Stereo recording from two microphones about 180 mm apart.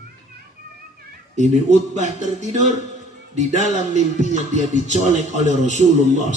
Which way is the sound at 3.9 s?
40° right (ahead or behind).